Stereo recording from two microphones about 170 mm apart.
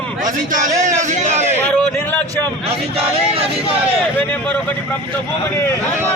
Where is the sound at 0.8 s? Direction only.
45° right (ahead or behind).